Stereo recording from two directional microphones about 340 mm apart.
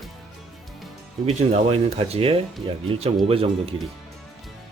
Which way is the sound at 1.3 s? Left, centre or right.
Centre.